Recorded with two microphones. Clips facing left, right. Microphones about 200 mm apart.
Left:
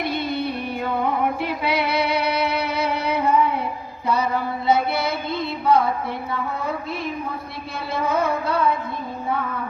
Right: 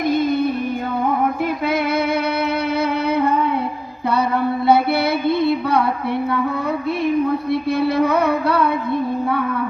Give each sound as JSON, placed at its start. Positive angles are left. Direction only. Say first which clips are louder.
{"t": 0.0, "sound": "music", "louder": "right 7 dB", "side_deg": -45}
{"t": 1.6, "sound": "female singing", "louder": "right 2 dB", "side_deg": -50}
{"t": 4.1, "sound": "music", "louder": "right 4 dB", "side_deg": -60}
{"t": 7.8, "sound": "music", "louder": "right 3 dB", "side_deg": -65}